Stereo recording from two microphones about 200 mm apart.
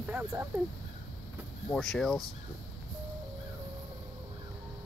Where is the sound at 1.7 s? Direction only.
Centre (ahead or behind).